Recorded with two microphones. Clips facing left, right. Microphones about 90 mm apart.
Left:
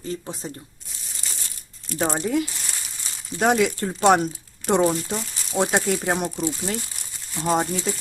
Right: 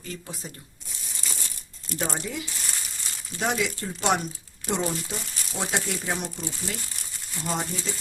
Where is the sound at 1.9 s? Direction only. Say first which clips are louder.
Left 8 dB; 40° left (ahead or behind).